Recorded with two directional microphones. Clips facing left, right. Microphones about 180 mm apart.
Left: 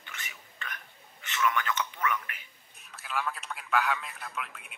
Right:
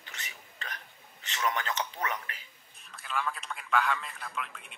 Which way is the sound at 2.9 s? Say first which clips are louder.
Even; 5° left (ahead or behind).